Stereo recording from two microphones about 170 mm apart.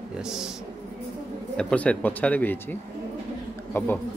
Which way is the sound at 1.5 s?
5° left (ahead or behind).